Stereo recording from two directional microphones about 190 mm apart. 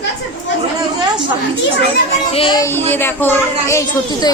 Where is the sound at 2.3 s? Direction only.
25° left (ahead or behind).